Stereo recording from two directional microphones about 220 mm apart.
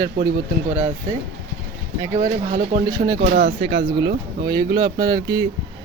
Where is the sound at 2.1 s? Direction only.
35° right (ahead or behind).